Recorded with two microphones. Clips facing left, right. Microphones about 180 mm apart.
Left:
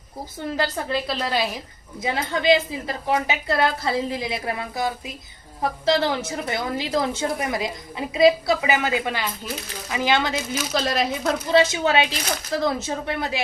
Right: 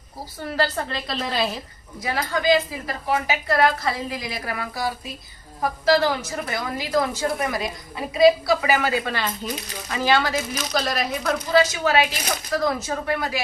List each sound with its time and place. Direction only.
0.4 s a woman's voice: 20° left (ahead or behind)
0.9 s a woman's voice: 5° left (ahead or behind)
2.0 s a woman's voice: 25° left (ahead or behind)